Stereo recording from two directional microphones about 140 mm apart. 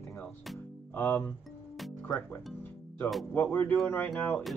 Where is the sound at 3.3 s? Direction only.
15° left (ahead or behind).